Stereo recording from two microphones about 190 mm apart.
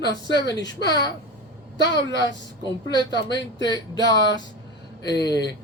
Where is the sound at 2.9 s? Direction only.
20° left (ahead or behind).